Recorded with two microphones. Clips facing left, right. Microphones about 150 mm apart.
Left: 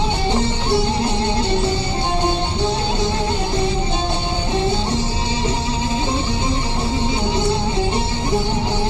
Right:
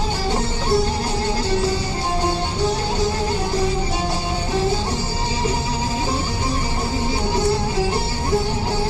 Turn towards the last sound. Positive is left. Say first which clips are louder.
# left 1 dB
turn(degrees=20)  # may be behind; listen again after turning